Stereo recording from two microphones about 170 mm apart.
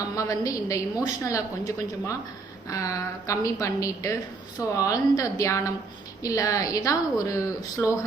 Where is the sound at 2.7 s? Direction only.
20° left (ahead or behind).